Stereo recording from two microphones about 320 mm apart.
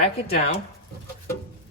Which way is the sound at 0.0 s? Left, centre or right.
Centre.